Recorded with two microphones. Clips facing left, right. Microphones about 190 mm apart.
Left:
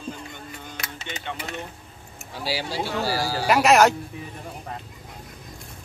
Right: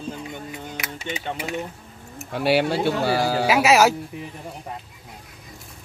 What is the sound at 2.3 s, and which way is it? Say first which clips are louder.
Speech: right 9 dB; 65° right (ahead or behind).